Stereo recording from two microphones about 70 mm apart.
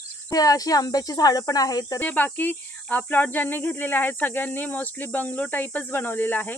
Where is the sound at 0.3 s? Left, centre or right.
Left.